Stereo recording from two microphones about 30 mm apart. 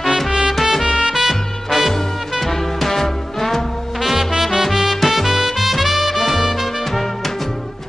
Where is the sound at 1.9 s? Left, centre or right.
Centre.